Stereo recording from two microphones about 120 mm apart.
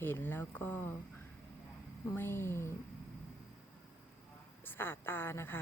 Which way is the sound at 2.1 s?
20° left (ahead or behind).